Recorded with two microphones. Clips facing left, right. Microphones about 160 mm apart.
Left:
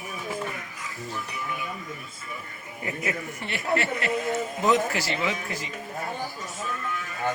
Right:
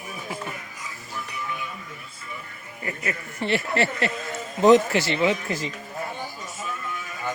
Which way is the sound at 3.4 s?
30° right (ahead or behind).